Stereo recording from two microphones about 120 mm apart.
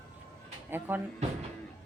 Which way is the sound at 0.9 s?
15° right (ahead or behind).